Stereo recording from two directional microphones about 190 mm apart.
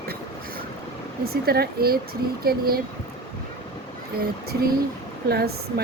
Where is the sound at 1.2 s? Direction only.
55° right (ahead or behind).